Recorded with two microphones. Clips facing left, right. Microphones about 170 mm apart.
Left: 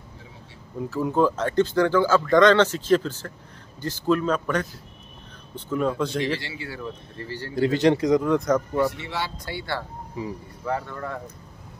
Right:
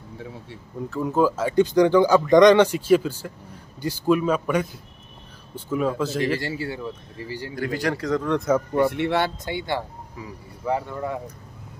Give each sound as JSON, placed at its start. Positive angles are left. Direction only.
{"t": 0.7, "sound": "speech", "side_deg": 5}
{"t": 5.7, "sound": "speech", "side_deg": -5}
{"t": 6.3, "sound": "speech", "side_deg": -45}
{"t": 6.8, "sound": "speech", "side_deg": -10}
{"t": 7.5, "sound": "speech", "side_deg": 25}
{"t": 8.3, "sound": "speech", "side_deg": -5}
{"t": 8.9, "sound": "speech", "side_deg": -60}
{"t": 9.4, "sound": "speech", "side_deg": -20}